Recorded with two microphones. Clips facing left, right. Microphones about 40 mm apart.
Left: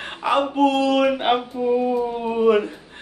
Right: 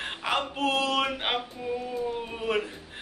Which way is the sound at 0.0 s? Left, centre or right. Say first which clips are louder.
Left 7 dB; centre.